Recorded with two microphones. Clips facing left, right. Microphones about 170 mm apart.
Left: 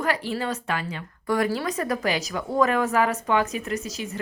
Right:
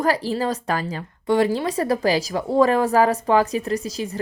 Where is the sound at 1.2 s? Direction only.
25° right (ahead or behind).